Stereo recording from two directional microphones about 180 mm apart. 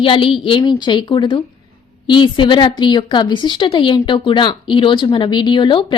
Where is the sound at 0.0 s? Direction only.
30° left (ahead or behind).